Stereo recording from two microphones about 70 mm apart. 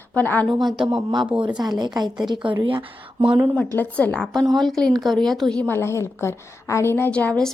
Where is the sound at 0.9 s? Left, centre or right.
Right.